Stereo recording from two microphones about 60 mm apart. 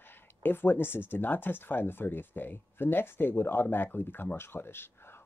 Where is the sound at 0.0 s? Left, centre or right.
Left.